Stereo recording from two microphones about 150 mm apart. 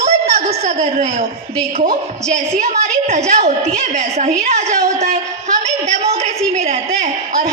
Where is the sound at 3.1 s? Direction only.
45° right (ahead or behind).